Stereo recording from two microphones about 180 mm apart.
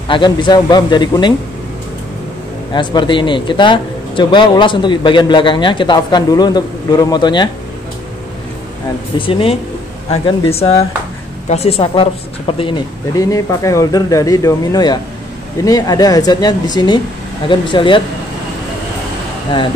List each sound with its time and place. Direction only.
0.1 s speech: 25° left (ahead or behind)
2.7 s speech: 25° left (ahead or behind)
9.2 s speech: 30° left (ahead or behind)